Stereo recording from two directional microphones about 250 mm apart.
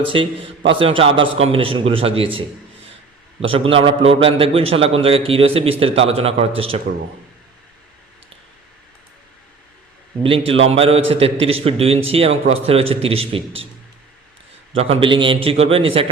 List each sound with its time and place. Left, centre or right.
0.1 s a man's voice: right
3.5 s a man's voice: right
10.2 s a man's voice: right
14.8 s a man's voice: right